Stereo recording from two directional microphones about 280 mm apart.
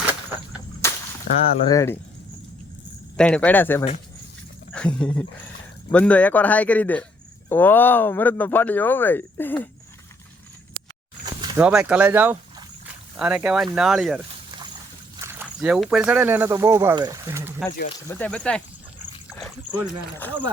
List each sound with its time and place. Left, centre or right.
0.8 s whip: centre
1.3 s speech: left
1.6 s speech: centre
3.2 s speech: centre
11.3 s speech: centre
15.2 s speech: centre
17.8 s speech: centre
20.1 s speech: centre